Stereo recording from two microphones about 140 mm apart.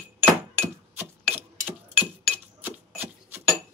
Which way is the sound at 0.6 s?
15° right (ahead or behind).